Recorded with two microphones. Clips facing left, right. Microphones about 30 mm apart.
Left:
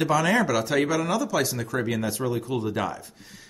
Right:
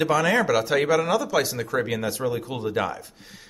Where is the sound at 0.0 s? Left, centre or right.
Centre.